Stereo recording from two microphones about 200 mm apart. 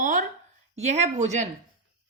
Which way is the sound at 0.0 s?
40° right (ahead or behind).